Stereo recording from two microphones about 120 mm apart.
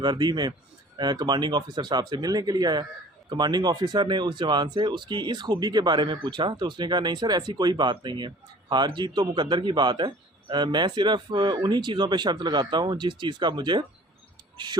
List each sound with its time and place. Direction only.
0.0 s speech: 35° right (ahead or behind)